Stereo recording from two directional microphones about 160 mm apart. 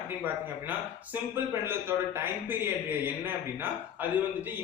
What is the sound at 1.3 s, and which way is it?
A man's voice, 15° right (ahead or behind).